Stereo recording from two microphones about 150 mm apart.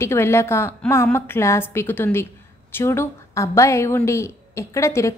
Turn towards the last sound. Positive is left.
turn(degrees=20)  # may be behind; listen again after turning